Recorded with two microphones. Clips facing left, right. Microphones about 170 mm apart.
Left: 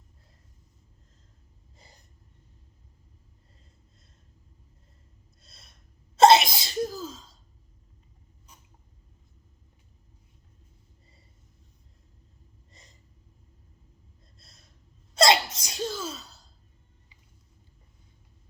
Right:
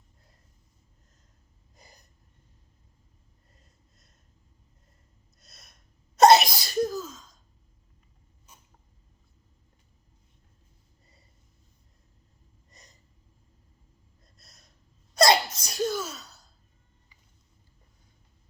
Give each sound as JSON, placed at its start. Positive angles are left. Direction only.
{"t": 5.4, "sound": "gasp", "side_deg": 30}
{"t": 6.1, "sound": "sneeze", "side_deg": 25}
{"t": 14.3, "sound": "gasp", "side_deg": 25}
{"t": 15.1, "sound": "sneeze", "side_deg": 25}
{"t": 15.5, "sound": "a sound", "side_deg": 20}
{"t": 16.0, "sound": "sigh", "side_deg": 30}